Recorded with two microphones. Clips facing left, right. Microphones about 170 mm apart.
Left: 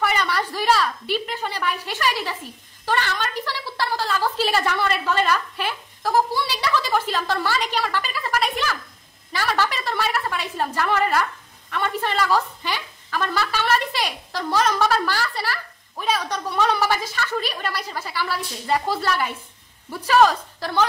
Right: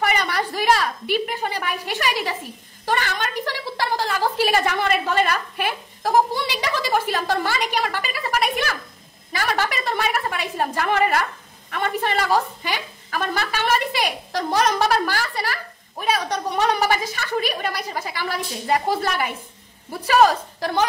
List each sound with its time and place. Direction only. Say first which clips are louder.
0.1 s a sound: right 1 dB; 15° right (ahead or behind)
1.0 s a woman's voice: right 3 dB; 10° right (ahead or behind)
2.8 s a sound: even; 15° right (ahead or behind)
7.0 s a woman's voice: right 2 dB; 15° right (ahead or behind)
9.7 s a woman's voice: right 1 dB; 15° right (ahead or behind)
19.9 s speech: even; 40° right (ahead or behind)